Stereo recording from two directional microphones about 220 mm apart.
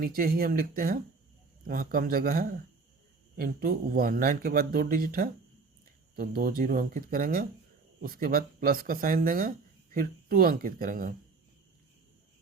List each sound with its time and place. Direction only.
0.0 s speech: 40° right (ahead or behind)